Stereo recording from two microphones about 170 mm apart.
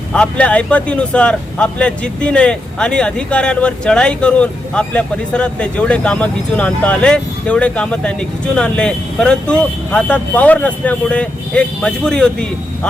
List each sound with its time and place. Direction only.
0.1 s speech: 5° left (ahead or behind)